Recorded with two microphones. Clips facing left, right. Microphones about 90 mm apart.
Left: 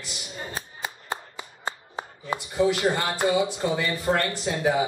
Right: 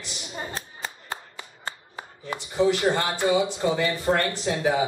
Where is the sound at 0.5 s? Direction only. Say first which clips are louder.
Left 1 dB; 15° left (ahead or behind).